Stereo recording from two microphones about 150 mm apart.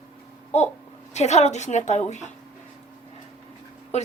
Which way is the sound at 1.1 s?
50° left (ahead or behind).